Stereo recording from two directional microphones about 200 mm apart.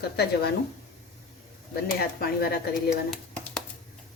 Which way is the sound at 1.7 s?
50° left (ahead or behind).